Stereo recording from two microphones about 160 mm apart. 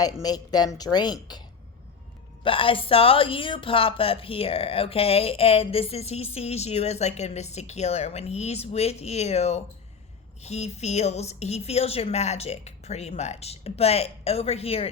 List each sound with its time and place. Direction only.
0.0 s speech: 25° left (ahead or behind)
2.4 s a woman's voice: 35° left (ahead or behind)